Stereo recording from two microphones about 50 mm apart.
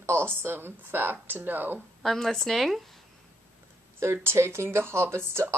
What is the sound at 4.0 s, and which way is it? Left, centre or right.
A woman's voice, right.